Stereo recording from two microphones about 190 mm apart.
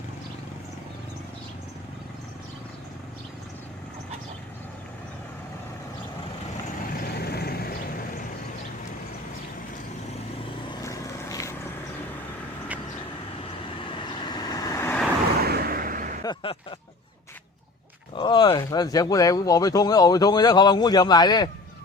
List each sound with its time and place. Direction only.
7.1 s vehicle: 55° left (ahead or behind)
10.7 s vehicle: 15° left (ahead or behind)
13.7 s vehicle: 25° left (ahead or behind)
15.4 s a sound: 55° right (ahead or behind)
16.2 s a sound: 25° left (ahead or behind)
18.1 s speech: 25° left (ahead or behind)